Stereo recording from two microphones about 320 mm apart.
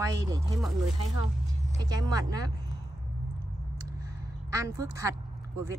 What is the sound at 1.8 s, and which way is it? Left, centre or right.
Speech, centre.